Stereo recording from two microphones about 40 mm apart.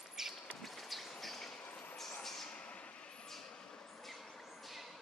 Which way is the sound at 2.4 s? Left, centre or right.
Left.